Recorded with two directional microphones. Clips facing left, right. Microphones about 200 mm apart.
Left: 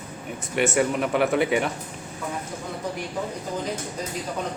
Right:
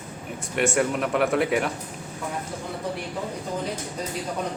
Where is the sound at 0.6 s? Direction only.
Centre (ahead or behind).